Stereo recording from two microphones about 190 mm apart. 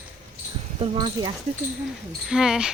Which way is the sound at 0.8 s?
25° right (ahead or behind).